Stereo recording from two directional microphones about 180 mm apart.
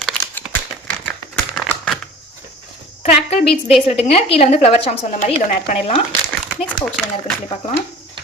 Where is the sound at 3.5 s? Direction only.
35° left (ahead or behind).